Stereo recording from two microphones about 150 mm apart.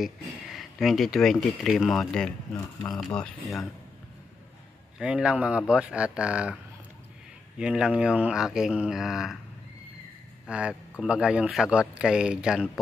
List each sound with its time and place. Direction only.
0.0 s speech: centre (ahead or behind)
2.5 s speech: 20° left (ahead or behind)
3.2 s speech: centre (ahead or behind)
4.9 s speech: 5° right (ahead or behind)
7.5 s speech: 5° right (ahead or behind)
10.4 s speech: 5° right (ahead or behind)